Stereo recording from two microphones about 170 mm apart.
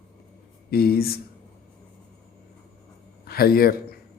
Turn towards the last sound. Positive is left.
turn(degrees=60)  # may be behind; listen again after turning